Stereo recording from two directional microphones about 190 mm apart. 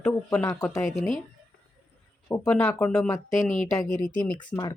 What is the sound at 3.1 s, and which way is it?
Speech, 15° left (ahead or behind).